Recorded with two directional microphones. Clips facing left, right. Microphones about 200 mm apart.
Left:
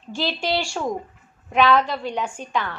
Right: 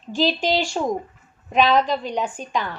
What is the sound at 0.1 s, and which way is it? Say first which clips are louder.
A woman's voice: right 4 dB; 15° right (ahead or behind).